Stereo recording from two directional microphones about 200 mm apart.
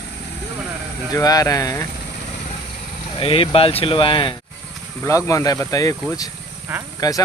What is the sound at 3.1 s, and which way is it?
Speech, 25° left (ahead or behind).